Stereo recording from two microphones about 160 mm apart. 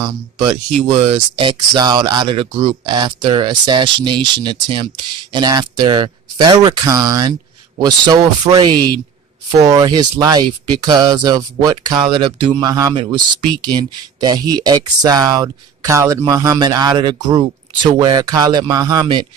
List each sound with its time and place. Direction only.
0.0 s speech: 30° right (ahead or behind)